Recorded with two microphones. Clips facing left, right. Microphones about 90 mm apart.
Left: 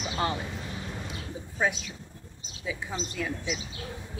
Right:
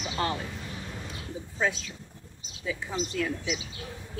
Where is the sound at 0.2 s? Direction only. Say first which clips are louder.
Even; 20° left (ahead or behind).